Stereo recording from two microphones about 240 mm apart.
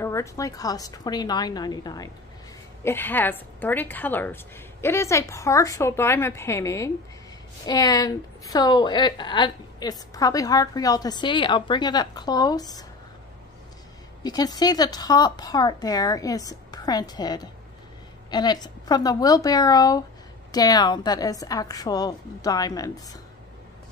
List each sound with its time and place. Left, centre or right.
0.0 s a woman's voice: centre
14.2 s a woman's voice: centre